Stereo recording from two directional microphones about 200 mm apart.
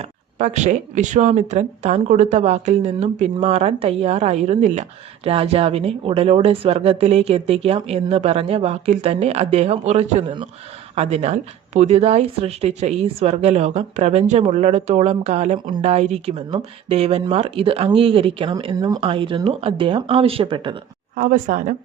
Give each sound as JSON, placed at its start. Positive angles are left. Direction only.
{"t": 0.0, "sound": "speech", "side_deg": -40}
{"t": 21.2, "sound": "speech", "side_deg": -40}